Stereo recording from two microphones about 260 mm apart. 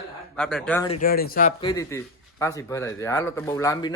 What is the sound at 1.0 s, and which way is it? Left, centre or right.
Speech, left.